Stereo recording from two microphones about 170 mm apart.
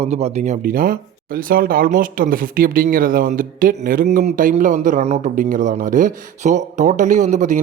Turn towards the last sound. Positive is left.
turn(degrees=-45)  # may be behind; listen again after turning